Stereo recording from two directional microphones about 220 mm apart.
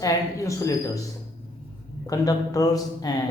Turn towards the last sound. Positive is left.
turn(degrees=15)  # may be behind; listen again after turning